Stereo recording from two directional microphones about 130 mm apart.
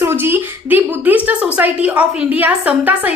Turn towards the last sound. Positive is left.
turn(degrees=-10)  # may be behind; listen again after turning